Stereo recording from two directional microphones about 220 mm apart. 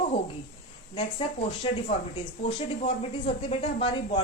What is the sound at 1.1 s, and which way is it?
Speech, 25° left (ahead or behind).